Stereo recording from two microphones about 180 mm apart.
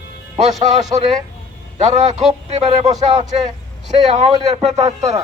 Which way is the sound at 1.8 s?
40° right (ahead or behind).